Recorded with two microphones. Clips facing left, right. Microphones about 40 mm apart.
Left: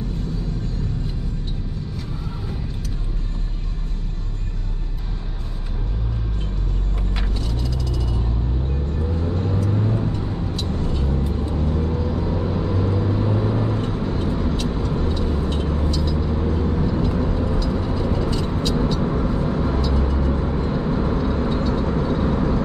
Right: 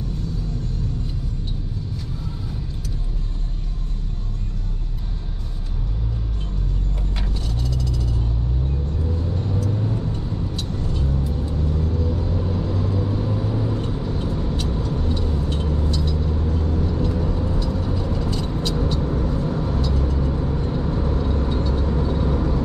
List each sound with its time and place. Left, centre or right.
9.2 s vehicle: left